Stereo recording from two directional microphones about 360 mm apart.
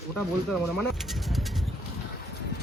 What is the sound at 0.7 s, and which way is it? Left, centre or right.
Bird, centre.